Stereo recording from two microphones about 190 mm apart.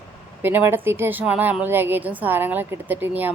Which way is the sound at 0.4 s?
10° right (ahead or behind).